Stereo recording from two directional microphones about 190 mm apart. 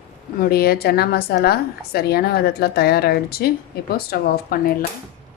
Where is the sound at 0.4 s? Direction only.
55° left (ahead or behind).